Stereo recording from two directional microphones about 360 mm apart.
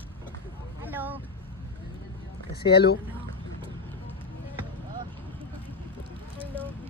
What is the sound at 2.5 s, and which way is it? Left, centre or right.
Speech, left.